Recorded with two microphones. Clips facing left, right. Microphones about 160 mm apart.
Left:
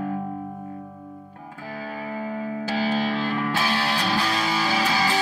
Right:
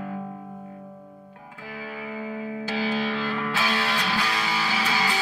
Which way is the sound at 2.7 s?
35° left (ahead or behind).